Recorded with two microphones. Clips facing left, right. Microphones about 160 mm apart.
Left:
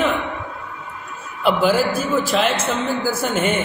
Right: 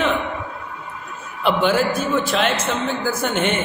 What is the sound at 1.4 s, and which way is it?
A man's voice, 5° left (ahead or behind).